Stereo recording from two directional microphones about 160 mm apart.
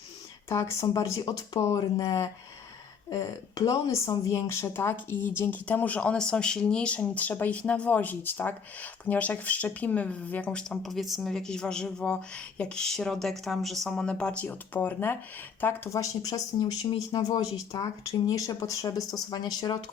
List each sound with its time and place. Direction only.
0.4 s a woman's voice: 20° left (ahead or behind)